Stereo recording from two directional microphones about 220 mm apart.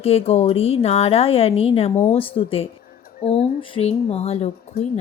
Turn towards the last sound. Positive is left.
turn(degrees=30)  # may be behind; listen again after turning